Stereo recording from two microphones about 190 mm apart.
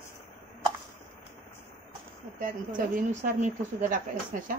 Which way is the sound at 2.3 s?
45° right (ahead or behind).